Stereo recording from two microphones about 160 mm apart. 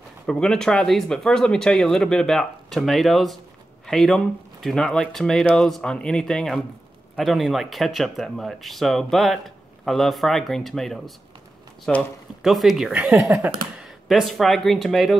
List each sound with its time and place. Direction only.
0.3 s speech: 5° left (ahead or behind); by 13.5 s 15° right (ahead or behind)
13.7 s speech: centre (ahead or behind)